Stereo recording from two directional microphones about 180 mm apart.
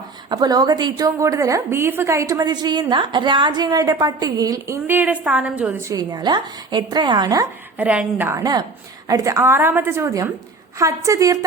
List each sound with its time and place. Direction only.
0.3 s a woman's voice: 25° right (ahead or behind); by 6.0 s 5° right (ahead or behind)
6.0 s a woman's voice: 20° right (ahead or behind)
7.8 s a woman's voice: 10° right (ahead or behind)